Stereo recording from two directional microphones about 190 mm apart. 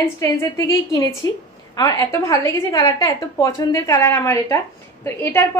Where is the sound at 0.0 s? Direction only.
15° left (ahead or behind).